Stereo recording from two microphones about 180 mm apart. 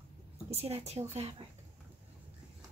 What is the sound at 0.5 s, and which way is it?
Speech, 35° right (ahead or behind).